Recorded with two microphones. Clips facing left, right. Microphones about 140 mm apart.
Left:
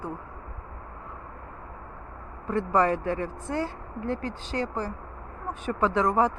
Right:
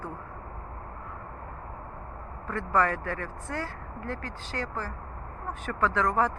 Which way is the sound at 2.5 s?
20° left (ahead or behind).